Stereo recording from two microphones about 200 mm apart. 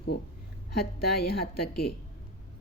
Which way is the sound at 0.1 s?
50° left (ahead or behind).